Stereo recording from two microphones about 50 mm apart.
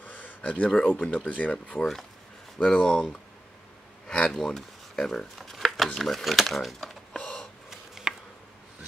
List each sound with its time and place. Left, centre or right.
0.0 s a sound: left
0.4 s speech: left
0.7 s speech: centre
1.8 s speech: centre
4.1 s speech: centre
5.4 s shuffling cards: centre
5.9 s speech: centre
7.2 s gasp: centre
8.1 s a sound: centre